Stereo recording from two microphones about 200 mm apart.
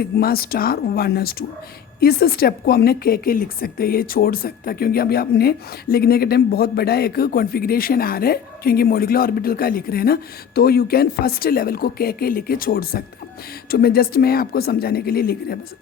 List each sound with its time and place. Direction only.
0.0 s a woman's voice: 50° left (ahead or behind)